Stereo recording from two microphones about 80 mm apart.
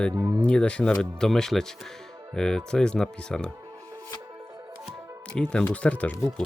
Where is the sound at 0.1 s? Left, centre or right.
Right.